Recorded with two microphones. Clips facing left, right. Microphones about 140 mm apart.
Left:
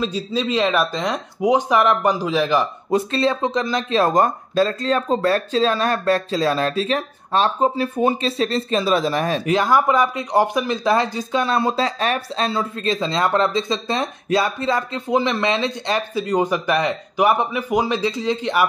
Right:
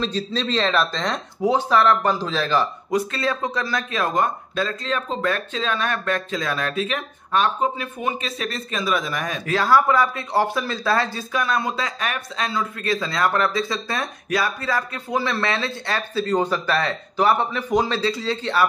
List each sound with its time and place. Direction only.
0.0 s speech: 10° left (ahead or behind)
2.9 s speech: 30° left (ahead or behind)
9.5 s speech: 20° left (ahead or behind)
11.4 s speech: 30° left (ahead or behind); by 18.7 s 15° left (ahead or behind)